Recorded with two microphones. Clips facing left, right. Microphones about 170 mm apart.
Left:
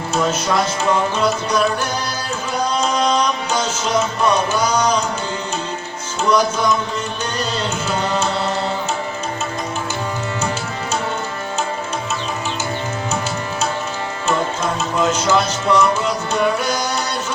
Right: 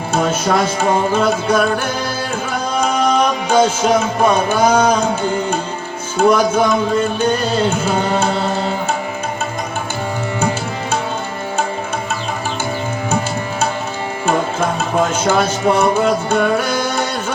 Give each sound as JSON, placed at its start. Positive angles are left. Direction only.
{"t": 0.8, "sound": "music", "side_deg": -50}
{"t": 6.1, "sound": "music", "side_deg": -55}
{"t": 14.9, "sound": "music", "side_deg": -50}